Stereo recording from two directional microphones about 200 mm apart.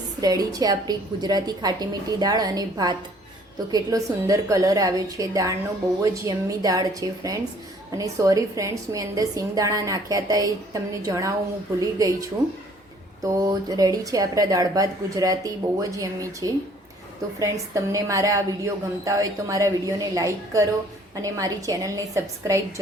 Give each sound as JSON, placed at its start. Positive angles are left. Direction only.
{"t": 0.2, "sound": "a woman's voice", "side_deg": -20}
{"t": 13.2, "sound": "speech", "side_deg": -20}